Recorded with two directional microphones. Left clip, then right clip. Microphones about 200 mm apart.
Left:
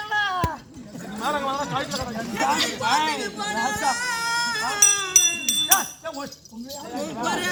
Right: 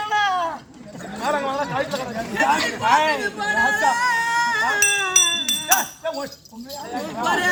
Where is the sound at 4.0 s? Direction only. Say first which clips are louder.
Right 5 dB; 15° left (ahead or behind).